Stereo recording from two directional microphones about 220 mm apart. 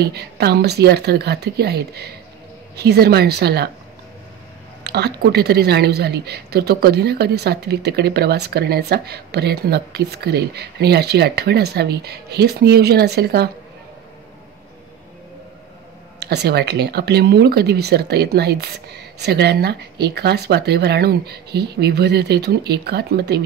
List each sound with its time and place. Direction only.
0.0 s a woman's voice: 50° right (ahead or behind)
4.8 s a woman's voice: 50° right (ahead or behind)
16.2 s a woman's voice: 50° right (ahead or behind)